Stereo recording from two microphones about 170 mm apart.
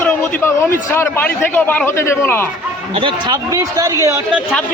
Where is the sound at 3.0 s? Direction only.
25° right (ahead or behind).